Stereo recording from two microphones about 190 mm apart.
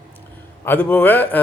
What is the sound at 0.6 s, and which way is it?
Speech, 10° left (ahead or behind).